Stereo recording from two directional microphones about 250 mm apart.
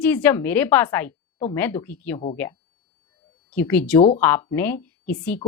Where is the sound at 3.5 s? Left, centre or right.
Centre.